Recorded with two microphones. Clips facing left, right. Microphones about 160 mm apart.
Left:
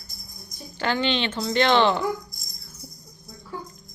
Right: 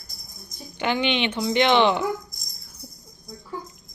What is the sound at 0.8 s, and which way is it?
Speech, 15° right (ahead or behind).